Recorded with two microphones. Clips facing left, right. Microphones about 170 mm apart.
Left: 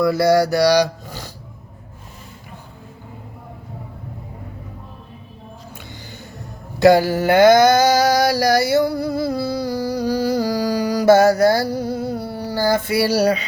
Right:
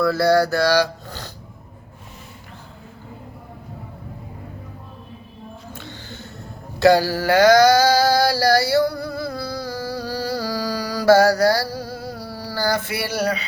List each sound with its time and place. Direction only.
0.0 s speech: 15° left (ahead or behind)
5.7 s a sound: 15° left (ahead or behind)
6.7 s mantra: 20° left (ahead or behind); by 13.3 s 35° left (ahead or behind)